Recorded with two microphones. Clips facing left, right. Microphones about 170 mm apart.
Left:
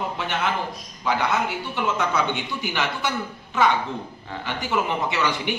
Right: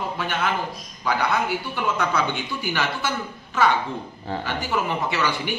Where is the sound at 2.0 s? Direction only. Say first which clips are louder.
Even; 20° left (ahead or behind).